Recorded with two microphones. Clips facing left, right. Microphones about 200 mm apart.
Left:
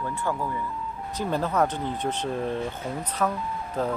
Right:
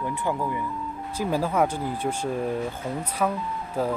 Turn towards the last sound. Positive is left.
turn(degrees=-10)  # may be behind; listen again after turning